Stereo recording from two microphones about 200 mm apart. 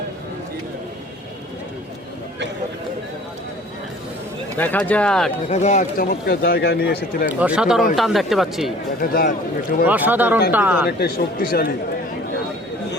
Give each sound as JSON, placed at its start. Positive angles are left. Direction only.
{"t": 4.5, "sound": "speech", "side_deg": 10}
{"t": 5.5, "sound": "a man's voice", "side_deg": 35}
{"t": 7.3, "sound": "speech", "side_deg": -5}
{"t": 9.0, "sound": "a man's voice", "side_deg": 50}
{"t": 9.8, "sound": "speech", "side_deg": -10}
{"t": 10.8, "sound": "a man's voice", "side_deg": 50}